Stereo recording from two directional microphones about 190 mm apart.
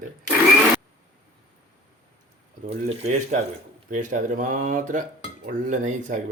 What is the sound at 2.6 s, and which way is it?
Speech, 35° right (ahead or behind).